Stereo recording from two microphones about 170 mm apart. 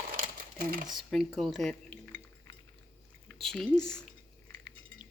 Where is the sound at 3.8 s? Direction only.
5° left (ahead or behind).